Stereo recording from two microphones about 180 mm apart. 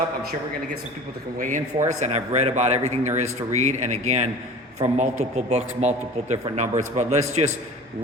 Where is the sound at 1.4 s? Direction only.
45° right (ahead or behind).